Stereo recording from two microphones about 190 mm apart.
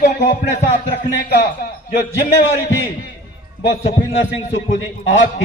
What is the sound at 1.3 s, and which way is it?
Speech, 65° left (ahead or behind).